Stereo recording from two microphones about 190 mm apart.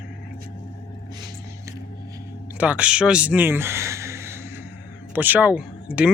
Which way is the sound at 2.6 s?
5° right (ahead or behind).